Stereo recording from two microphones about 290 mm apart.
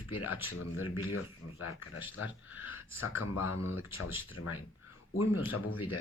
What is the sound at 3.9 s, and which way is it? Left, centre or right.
Speech, left.